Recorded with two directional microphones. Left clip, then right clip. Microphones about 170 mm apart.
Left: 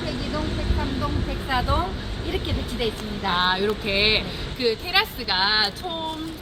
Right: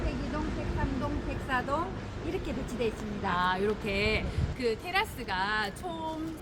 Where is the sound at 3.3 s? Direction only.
15° right (ahead or behind).